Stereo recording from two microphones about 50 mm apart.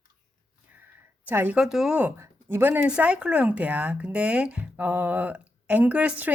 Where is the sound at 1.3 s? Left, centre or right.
Right.